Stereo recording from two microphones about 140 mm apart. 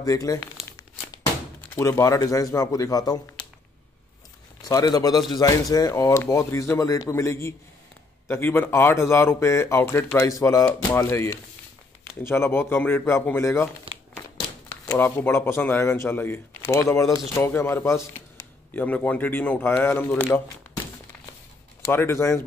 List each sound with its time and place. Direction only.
0.0 s speech: 25° left (ahead or behind)
1.6 s speech: 20° left (ahead or behind)
4.6 s speech: 25° left (ahead or behind)
13.9 s crumpling: 40° right (ahead or behind)
14.9 s speech: 15° left (ahead or behind)
21.8 s speech: 20° left (ahead or behind)